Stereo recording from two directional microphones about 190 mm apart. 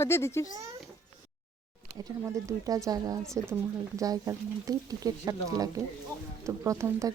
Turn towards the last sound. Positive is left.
turn(degrees=-15)  # may be behind; listen again after turning